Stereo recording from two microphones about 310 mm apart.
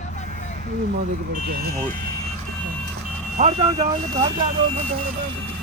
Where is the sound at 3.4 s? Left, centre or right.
Right.